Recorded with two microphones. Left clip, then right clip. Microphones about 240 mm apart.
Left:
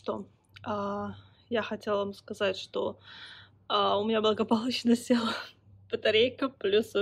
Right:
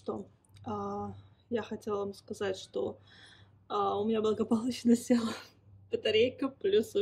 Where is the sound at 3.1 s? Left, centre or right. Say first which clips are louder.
Left 9 dB; centre.